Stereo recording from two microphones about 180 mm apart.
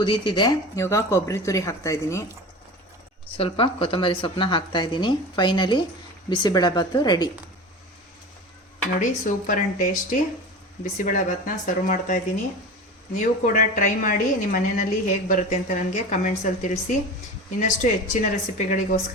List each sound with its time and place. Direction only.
0.0 s speech: 25° left (ahead or behind)
3.3 s a woman's voice: 30° left (ahead or behind)
9.0 s a woman's voice: 45° left (ahead or behind)
10.9 s a woman's voice: 45° left (ahead or behind)